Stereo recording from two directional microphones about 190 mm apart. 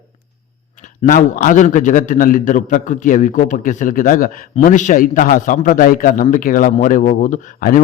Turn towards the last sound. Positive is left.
turn(degrees=45)  # may be behind; listen again after turning